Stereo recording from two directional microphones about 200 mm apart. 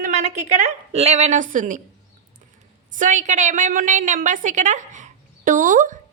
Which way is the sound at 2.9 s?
40° right (ahead or behind).